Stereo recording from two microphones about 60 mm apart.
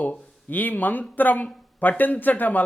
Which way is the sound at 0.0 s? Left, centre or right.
Left.